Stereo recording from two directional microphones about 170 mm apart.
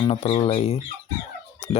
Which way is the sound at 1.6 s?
40° left (ahead or behind).